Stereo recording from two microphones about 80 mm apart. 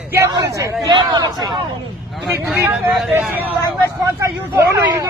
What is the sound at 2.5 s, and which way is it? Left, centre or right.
Speech, right.